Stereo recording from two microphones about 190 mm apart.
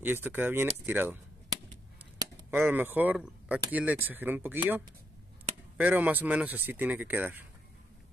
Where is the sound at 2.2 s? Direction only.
10° right (ahead or behind).